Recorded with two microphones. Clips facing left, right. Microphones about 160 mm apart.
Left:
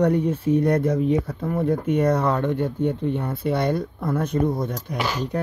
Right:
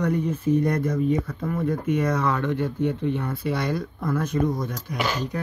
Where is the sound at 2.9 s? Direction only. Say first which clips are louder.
Left 1 dB; 30° left (ahead or behind).